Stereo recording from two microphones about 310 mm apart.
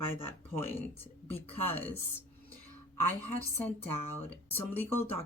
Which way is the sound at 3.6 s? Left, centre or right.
Centre.